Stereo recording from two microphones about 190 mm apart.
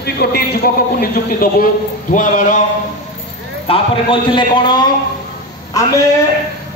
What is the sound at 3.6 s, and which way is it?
A man's voice, 30° left (ahead or behind).